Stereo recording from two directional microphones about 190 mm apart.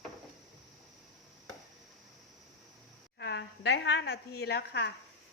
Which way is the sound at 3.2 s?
65° left (ahead or behind).